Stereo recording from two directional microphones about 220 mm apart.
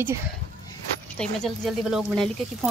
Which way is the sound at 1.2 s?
Centre (ahead or behind).